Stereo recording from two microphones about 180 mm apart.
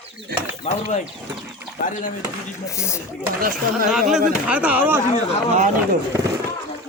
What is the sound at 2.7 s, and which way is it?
Speech, 15° left (ahead or behind).